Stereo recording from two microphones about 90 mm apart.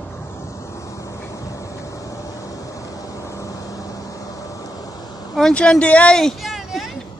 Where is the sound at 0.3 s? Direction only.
35° left (ahead or behind).